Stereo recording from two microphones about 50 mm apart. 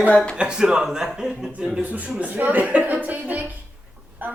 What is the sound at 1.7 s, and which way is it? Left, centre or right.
A man's voice, right.